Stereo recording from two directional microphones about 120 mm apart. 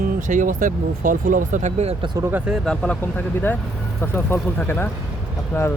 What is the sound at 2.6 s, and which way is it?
Speech, 10° left (ahead or behind).